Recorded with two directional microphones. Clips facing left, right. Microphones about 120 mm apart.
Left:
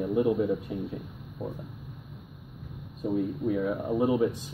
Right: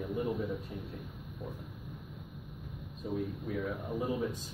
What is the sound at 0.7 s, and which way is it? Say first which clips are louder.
Speech: left 10 dB; 90° left.